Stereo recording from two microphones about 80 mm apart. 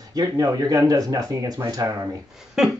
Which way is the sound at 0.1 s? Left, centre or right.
Right.